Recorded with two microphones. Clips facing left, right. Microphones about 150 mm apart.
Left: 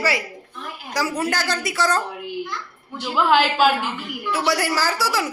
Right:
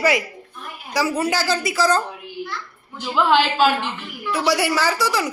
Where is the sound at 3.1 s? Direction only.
10° left (ahead or behind).